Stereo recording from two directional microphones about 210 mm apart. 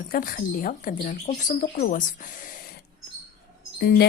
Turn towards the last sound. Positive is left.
turn(degrees=50)  # may be behind; listen again after turning